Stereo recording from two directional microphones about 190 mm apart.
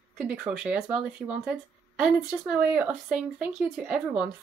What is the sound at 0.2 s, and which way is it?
Speech, 5° right (ahead or behind).